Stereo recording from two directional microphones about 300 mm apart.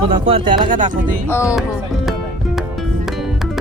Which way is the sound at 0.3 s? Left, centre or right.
Centre.